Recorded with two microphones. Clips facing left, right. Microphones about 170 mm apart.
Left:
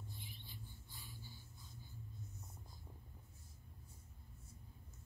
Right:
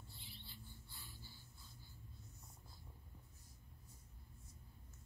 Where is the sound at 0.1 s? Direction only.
15° left (ahead or behind).